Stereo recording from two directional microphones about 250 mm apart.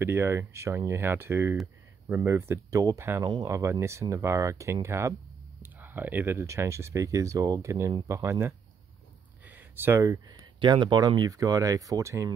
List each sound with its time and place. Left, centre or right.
0.0 s speech: centre